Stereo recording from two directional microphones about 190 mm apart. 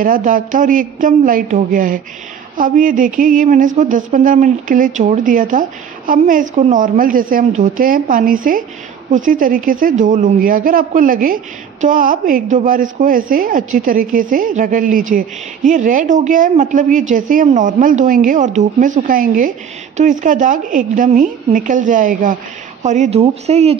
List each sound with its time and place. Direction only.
0.0 s a woman's voice: 45° right (ahead or behind)